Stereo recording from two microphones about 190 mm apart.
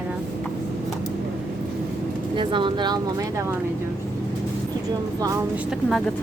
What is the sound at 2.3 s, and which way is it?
Speech, 25° right (ahead or behind).